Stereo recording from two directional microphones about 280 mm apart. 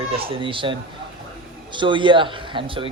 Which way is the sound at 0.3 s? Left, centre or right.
Centre.